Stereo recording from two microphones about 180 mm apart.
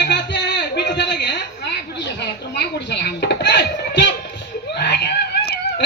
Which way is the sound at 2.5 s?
65° left (ahead or behind).